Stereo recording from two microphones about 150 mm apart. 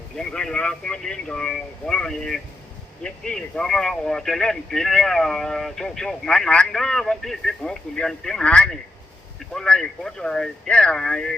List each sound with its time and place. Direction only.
0.2 s speech: 5° left (ahead or behind)